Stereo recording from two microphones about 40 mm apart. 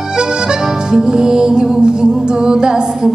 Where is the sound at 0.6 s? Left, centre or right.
Centre.